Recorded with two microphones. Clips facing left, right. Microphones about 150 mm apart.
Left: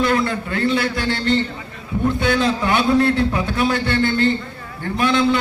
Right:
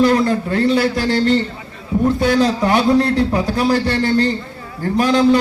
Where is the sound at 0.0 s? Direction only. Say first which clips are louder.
Right 5 dB; 35° right (ahead or behind).